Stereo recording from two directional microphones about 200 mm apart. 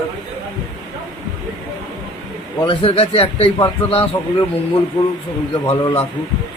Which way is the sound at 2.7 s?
30° left (ahead or behind).